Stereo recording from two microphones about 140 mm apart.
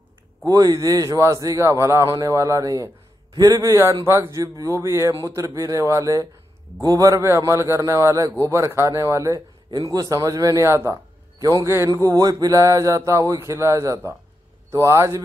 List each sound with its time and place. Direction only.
0.5 s a man's voice: 25° right (ahead or behind)